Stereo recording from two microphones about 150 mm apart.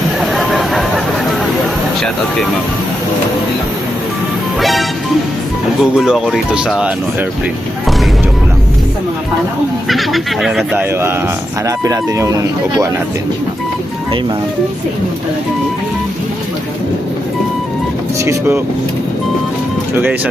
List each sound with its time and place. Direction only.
0.2 s a sound: centre (ahead or behind)
4.6 s music: centre (ahead or behind)
5.8 s speech: 5° right (ahead or behind)
9.9 s speech: centre (ahead or behind)
11.6 s speech: 25° right (ahead or behind)
18.3 s speech: 15° right (ahead or behind)